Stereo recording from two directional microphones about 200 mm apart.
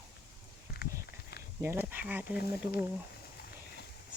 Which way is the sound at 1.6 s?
10° right (ahead or behind).